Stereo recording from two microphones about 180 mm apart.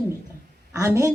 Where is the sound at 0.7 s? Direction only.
15° right (ahead or behind).